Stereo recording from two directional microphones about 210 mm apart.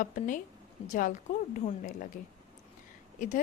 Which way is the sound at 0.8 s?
25° left (ahead or behind).